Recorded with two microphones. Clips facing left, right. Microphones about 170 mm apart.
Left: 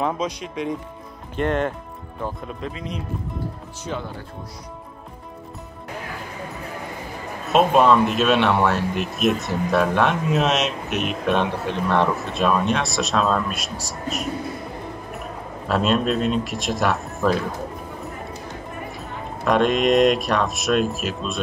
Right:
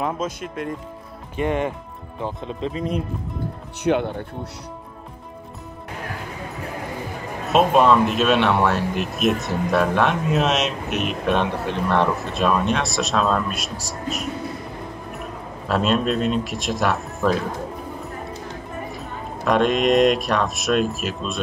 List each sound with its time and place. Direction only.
0.0 s speech: 5° right (ahead or behind)
2.2 s speech: 25° right (ahead or behind)
2.7 s speech: 45° right (ahead or behind)
3.8 s speech: 65° right (ahead or behind)
7.4 s speech: centre (ahead or behind)
15.7 s speech: centre (ahead or behind)
18.9 s speech: centre (ahead or behind)